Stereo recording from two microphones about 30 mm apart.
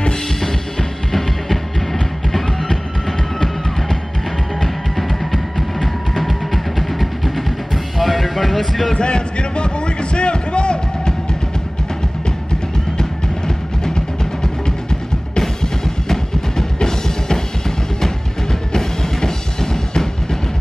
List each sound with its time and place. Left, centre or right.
0.4 s music: centre
4.9 s music: centre
8.9 s a sound: left
13.8 s music: left